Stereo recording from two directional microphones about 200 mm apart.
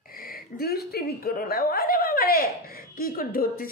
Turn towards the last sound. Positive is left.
turn(degrees=45)  # may be behind; listen again after turning